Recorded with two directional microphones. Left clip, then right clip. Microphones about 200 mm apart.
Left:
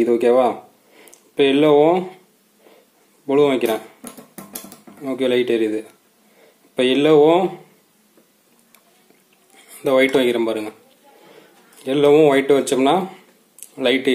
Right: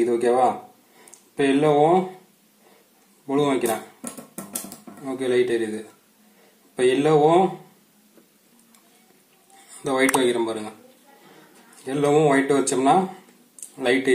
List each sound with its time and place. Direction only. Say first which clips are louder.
0.0 s speech: left 4 dB; 40° left (ahead or behind)
3.3 s speech: left 6 dB; 40° left (ahead or behind)
4.0 s music: right 1 dB; 15° left (ahead or behind)
5.0 s speech: left 3 dB; 40° left (ahead or behind)
9.7 s speech: left 5 dB; 35° left (ahead or behind)
11.8 s speech: left 6 dB; 40° left (ahead or behind)